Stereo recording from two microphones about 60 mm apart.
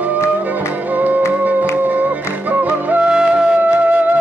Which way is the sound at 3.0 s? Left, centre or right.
Centre.